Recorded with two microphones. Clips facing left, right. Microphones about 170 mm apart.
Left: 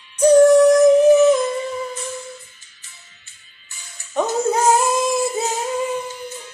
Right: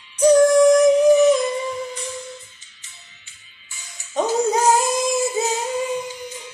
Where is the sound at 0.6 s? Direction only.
15° right (ahead or behind).